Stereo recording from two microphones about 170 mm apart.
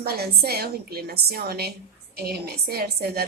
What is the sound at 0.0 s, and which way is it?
A child's voice, 70° right (ahead or behind).